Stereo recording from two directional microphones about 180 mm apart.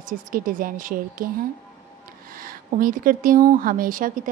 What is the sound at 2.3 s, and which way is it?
Speech, 55° right (ahead or behind).